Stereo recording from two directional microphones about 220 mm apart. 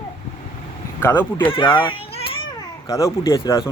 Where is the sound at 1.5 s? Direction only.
20° left (ahead or behind).